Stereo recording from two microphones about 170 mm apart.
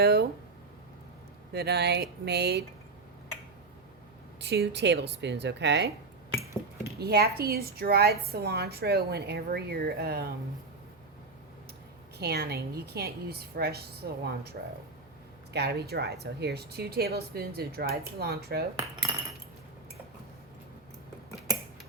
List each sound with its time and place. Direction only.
0.0 s a woman's voice: 70° right (ahead or behind)
1.5 s a woman's voice: 75° right (ahead or behind)
4.4 s speech: 80° right
7.0 s a woman's voice: 70° right (ahead or behind)
12.2 s a woman's voice: 70° right (ahead or behind)
15.5 s a woman's voice: 70° right (ahead or behind)
18.8 s cutlery: 20° right (ahead or behind)